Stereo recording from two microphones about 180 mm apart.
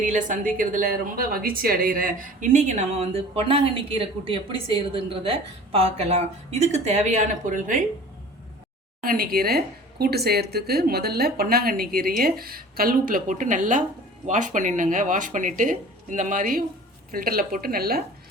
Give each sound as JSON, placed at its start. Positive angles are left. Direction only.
{"t": 0.0, "sound": "a woman's voice", "side_deg": -45}
{"t": 9.0, "sound": "speech", "side_deg": -55}